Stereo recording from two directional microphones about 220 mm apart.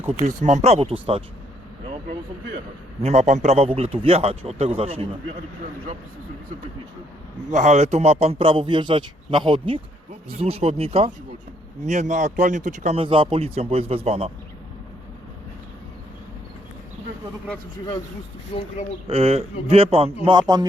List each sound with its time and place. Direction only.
0.1 s a man's voice: 30° right (ahead or behind)
1.8 s vehicle: 25° right (ahead or behind)
3.0 s a man's voice: 30° right (ahead or behind)
7.5 s a man's voice: 30° right (ahead or behind)
18.5 s speech: 25° left (ahead or behind)
19.0 s a man's voice: 25° right (ahead or behind)